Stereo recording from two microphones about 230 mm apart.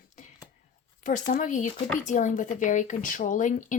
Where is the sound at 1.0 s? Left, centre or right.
Left.